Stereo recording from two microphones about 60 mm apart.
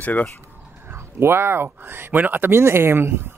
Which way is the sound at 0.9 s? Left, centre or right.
Right.